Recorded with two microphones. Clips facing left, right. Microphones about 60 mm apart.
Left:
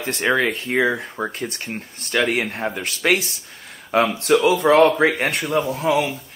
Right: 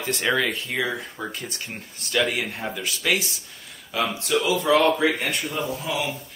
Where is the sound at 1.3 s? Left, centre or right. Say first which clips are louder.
Left 6 dB; left.